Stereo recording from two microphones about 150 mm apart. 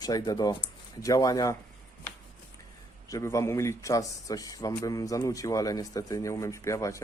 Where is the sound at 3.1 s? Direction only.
20° left (ahead or behind).